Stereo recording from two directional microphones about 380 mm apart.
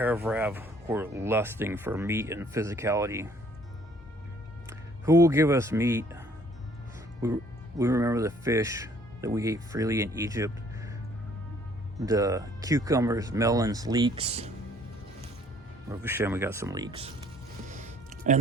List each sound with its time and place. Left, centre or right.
0.0 s speech: centre
5.0 s speech: centre
7.8 s speech: centre
11.9 s speech: centre
15.9 s speech: centre
17.7 s music: centre